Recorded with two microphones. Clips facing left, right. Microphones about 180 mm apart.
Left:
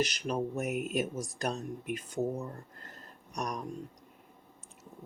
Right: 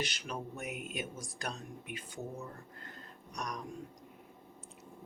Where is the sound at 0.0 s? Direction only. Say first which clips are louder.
Left 8 dB; 40° left (ahead or behind).